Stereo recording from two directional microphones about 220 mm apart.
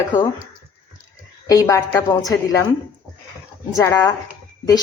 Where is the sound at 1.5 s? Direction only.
15° left (ahead or behind).